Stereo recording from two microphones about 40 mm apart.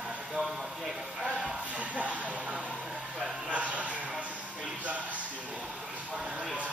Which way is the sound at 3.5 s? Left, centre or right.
Right.